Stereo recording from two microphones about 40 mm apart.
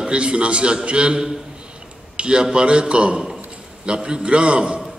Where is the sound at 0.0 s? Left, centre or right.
Right.